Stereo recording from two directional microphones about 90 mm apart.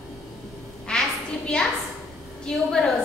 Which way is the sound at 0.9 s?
10° left (ahead or behind).